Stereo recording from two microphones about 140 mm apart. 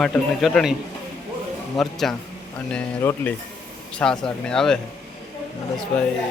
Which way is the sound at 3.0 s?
20° left (ahead or behind).